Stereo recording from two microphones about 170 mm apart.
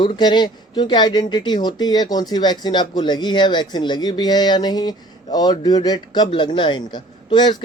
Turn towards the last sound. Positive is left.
turn(degrees=25)  # may be behind; listen again after turning